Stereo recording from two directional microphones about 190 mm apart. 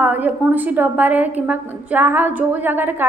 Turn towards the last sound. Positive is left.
turn(degrees=-10)  # may be behind; listen again after turning